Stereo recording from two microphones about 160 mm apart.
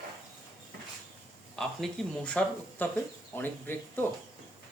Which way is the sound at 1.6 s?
5° left (ahead or behind).